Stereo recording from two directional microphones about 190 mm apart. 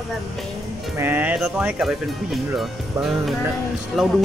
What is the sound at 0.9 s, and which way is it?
Speech, 10° right (ahead or behind).